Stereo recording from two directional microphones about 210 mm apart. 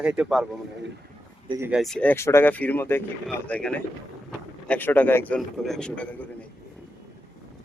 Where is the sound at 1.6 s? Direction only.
Centre (ahead or behind).